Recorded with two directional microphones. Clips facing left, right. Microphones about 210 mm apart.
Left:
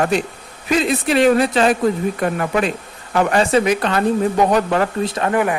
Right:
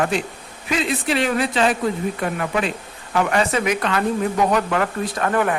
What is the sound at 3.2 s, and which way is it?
Speech, 35° left (ahead or behind).